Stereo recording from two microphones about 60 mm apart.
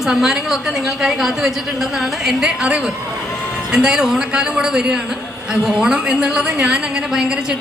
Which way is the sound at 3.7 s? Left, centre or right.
Centre.